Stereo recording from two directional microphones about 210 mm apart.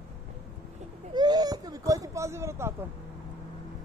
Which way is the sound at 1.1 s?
20° right (ahead or behind).